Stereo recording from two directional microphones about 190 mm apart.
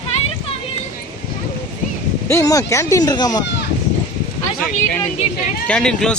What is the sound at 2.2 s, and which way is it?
Speech, 15° left (ahead or behind).